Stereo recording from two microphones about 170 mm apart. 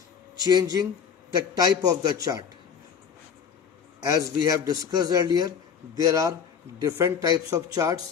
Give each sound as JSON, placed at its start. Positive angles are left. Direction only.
{"t": 0.4, "sound": "speech", "side_deg": -20}
{"t": 4.0, "sound": "speech", "side_deg": -20}